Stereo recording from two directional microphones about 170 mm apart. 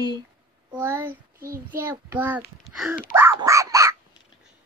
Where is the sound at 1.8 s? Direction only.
15° right (ahead or behind).